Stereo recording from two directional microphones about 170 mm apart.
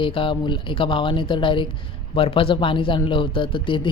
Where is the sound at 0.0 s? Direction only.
30° left (ahead or behind).